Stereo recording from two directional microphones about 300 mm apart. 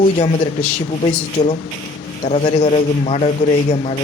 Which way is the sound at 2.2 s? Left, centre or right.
Left.